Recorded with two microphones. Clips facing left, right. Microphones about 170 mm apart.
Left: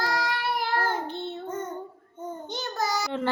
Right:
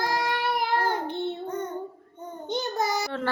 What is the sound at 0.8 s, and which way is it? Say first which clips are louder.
Child singing: right 2 dB; 15° right (ahead or behind).